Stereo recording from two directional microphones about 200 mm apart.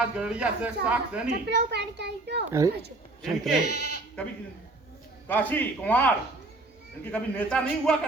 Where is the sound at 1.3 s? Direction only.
60° right (ahead or behind).